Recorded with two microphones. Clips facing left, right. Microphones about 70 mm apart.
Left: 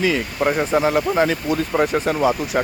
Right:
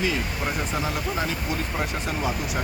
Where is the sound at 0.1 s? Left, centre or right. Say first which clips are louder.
Left 8 dB; left.